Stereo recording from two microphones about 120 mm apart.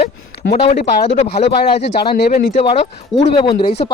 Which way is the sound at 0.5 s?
60° left (ahead or behind).